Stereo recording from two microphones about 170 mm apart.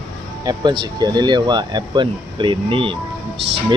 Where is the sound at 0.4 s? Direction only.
25° right (ahead or behind).